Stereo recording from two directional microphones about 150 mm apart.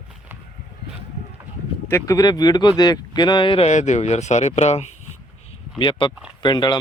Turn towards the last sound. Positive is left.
turn(degrees=30)  # may be behind; listen again after turning